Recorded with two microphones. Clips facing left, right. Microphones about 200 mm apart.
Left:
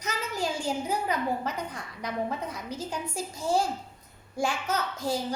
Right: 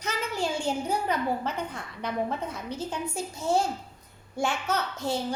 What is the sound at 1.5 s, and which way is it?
A child's voice, 30° right (ahead or behind).